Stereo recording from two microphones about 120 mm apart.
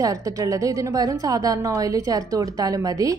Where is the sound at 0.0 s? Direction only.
30° right (ahead or behind).